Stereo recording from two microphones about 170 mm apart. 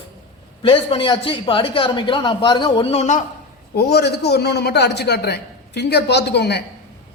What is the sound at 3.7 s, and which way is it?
A man's voice, 70° left (ahead or behind).